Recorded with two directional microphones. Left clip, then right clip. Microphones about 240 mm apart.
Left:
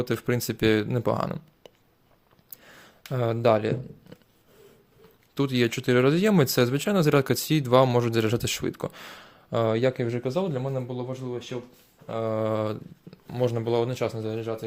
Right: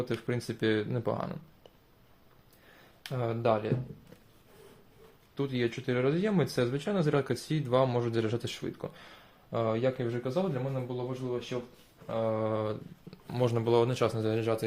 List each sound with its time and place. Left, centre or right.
0.0 s speech: left
3.1 s speech: left
5.3 s speech: left
13.1 s speech: centre